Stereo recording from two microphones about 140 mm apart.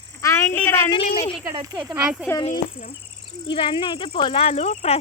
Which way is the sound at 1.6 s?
35° right (ahead or behind).